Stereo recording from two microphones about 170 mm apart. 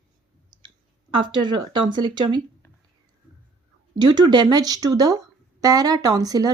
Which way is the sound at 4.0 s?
25° right (ahead or behind).